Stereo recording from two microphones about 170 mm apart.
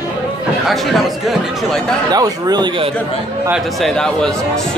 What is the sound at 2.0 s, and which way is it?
Speech, 25° right (ahead or behind).